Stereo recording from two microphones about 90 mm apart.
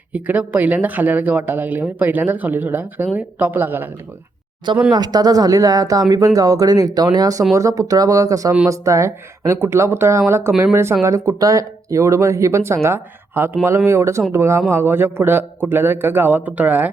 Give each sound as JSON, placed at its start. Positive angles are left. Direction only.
{"t": 0.1, "sound": "speech", "side_deg": -20}
{"t": 4.9, "sound": "speech", "side_deg": -50}